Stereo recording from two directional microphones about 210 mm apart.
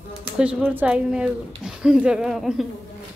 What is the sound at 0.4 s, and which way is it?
Speech, 5° right (ahead or behind).